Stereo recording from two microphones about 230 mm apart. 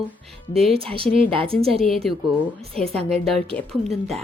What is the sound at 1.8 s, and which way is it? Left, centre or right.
A woman's voice, centre.